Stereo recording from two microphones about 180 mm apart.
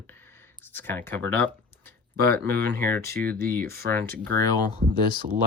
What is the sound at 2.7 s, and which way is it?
Speech, 10° left (ahead or behind).